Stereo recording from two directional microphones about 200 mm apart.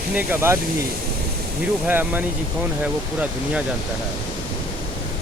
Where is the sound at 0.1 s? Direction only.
10° right (ahead or behind).